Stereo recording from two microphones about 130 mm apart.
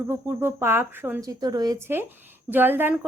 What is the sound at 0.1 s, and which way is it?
A woman's voice, 20° right (ahead or behind).